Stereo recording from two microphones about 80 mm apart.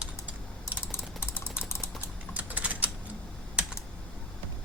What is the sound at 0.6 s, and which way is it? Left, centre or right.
Typing, left.